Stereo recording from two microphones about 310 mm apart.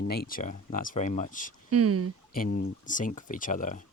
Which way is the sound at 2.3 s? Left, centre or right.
Left.